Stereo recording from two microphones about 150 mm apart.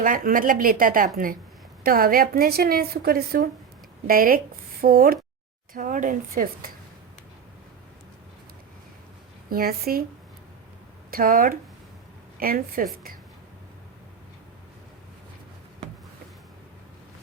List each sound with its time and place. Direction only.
0.0 s a woman's voice: 65° right (ahead or behind); by 3.5 s 85° right
4.0 s a woman's voice: 70° right (ahead or behind)
5.7 s speech: 65° right (ahead or behind)
9.5 s a woman's voice: 85° right
11.1 s a woman's voice: 70° right (ahead or behind)